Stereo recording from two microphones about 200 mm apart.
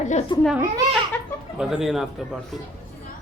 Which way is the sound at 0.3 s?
25° left (ahead or behind).